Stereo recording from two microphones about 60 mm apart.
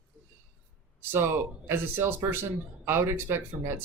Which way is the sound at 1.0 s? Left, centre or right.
Right.